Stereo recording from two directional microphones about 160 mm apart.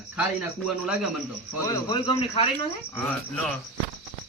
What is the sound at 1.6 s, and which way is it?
Speech, 25° left (ahead or behind).